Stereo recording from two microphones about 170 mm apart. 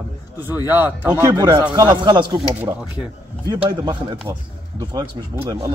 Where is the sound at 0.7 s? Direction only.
10° right (ahead or behind).